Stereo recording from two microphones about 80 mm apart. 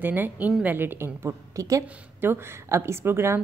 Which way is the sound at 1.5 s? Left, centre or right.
Right.